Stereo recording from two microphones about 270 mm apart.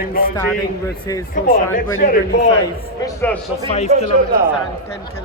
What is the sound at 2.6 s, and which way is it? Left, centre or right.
Speech, centre.